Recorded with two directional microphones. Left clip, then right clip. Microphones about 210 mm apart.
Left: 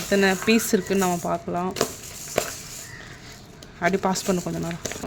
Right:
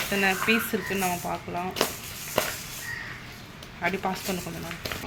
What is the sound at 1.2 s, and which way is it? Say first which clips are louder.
Speech: left 5 dB; 50° left (ahead or behind).